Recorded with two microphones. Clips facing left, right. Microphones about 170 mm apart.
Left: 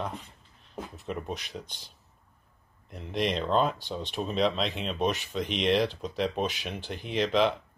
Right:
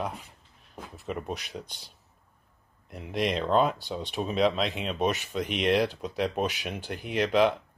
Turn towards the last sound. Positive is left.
turn(degrees=-5)  # may be behind; listen again after turning